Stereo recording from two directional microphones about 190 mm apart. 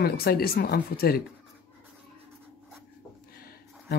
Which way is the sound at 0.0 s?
55° left (ahead or behind).